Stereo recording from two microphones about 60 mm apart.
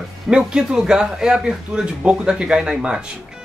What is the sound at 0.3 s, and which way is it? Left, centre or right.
Speech, centre.